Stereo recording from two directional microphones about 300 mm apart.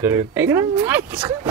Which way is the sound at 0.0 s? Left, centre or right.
Centre.